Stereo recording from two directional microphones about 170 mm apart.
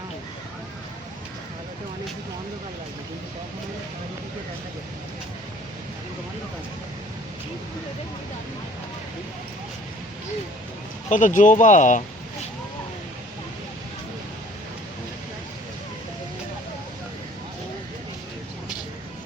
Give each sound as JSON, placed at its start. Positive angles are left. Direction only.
{"t": 11.1, "sound": "speech", "side_deg": 50}